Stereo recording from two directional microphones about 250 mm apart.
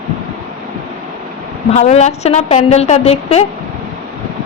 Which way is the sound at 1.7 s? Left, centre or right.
Left.